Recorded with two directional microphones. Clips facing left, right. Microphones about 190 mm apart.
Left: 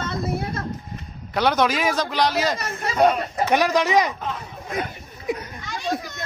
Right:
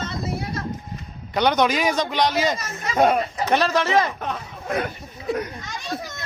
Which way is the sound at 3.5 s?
15° left (ahead or behind).